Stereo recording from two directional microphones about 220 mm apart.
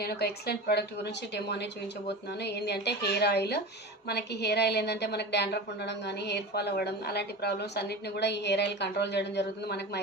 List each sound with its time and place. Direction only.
0.0 s a woman's voice: 45° left (ahead or behind)